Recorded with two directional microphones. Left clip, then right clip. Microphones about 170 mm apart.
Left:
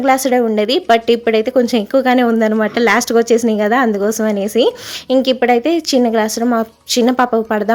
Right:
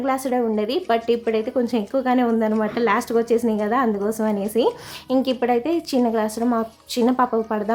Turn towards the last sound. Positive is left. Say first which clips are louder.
# left 6 dB
turn(degrees=25)  # may be behind; listen again after turning